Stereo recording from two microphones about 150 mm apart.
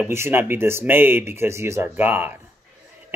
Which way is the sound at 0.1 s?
15° right (ahead or behind).